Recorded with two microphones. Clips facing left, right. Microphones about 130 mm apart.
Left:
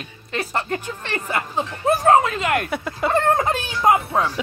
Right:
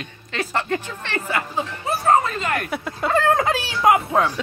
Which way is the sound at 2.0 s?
85° left.